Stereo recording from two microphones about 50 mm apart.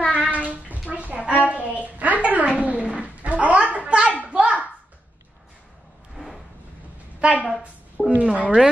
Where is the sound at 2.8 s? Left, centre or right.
Right.